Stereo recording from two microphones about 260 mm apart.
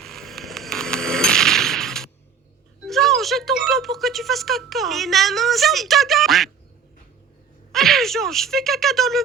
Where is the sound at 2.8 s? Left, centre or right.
Centre.